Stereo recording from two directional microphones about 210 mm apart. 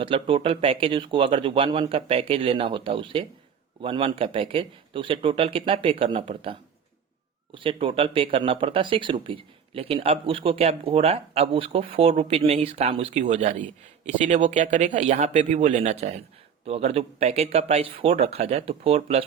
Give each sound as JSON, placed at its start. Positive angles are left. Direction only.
{"t": 0.0, "sound": "speech", "side_deg": -25}